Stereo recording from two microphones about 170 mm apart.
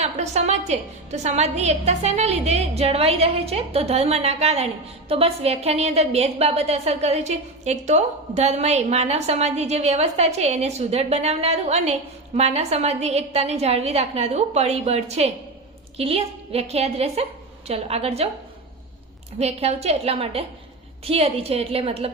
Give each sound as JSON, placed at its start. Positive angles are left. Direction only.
{"t": 0.0, "sound": "a woman's voice", "side_deg": -40}
{"t": 19.4, "sound": "a woman's voice", "side_deg": -40}